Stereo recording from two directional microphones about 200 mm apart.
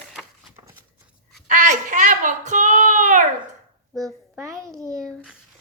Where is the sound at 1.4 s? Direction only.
40° right (ahead or behind).